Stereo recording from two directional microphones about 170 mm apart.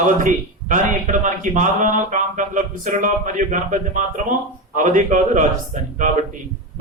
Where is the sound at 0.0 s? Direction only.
50° right (ahead or behind).